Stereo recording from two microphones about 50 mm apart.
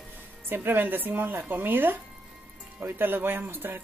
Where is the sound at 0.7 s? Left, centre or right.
Right.